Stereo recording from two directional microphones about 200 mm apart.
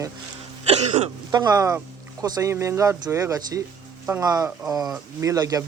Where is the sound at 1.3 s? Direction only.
20° right (ahead or behind).